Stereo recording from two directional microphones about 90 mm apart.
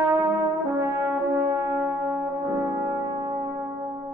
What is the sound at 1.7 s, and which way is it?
Music, 25° right (ahead or behind).